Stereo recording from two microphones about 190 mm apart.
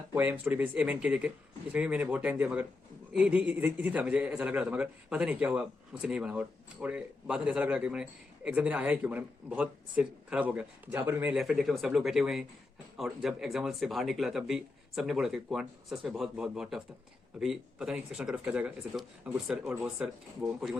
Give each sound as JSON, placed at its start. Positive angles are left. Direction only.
{"t": 0.1, "sound": "a man's voice", "side_deg": -10}